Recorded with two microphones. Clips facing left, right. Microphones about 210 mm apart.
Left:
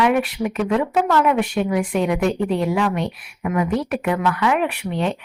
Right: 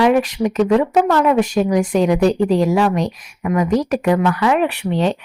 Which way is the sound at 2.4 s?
90° right.